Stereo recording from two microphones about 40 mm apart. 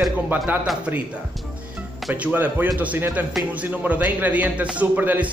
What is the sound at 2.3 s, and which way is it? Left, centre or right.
Speech, right.